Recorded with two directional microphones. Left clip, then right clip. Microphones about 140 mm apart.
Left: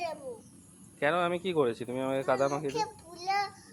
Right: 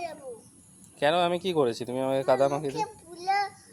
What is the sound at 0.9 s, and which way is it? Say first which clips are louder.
Speech: right 4 dB; 80° right.